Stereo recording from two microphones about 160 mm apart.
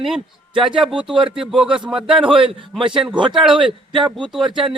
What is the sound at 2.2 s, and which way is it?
Speech, 35° right (ahead or behind).